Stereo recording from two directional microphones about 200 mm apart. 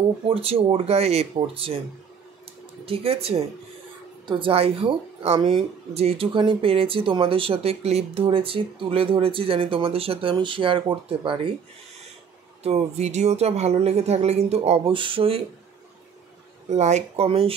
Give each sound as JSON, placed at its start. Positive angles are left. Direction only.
{"t": 0.3, "sound": "speech", "side_deg": -30}
{"t": 2.8, "sound": "speech", "side_deg": -30}
{"t": 12.6, "sound": "speech", "side_deg": -30}
{"t": 16.6, "sound": "speech", "side_deg": -35}